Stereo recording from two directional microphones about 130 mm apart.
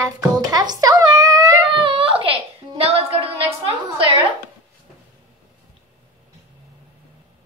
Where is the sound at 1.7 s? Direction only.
40° right (ahead or behind).